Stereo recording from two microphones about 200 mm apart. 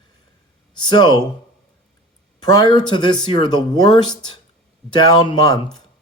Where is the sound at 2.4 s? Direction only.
20° left (ahead or behind).